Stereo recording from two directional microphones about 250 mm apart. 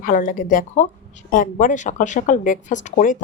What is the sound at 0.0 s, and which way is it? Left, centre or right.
A woman's voice, left.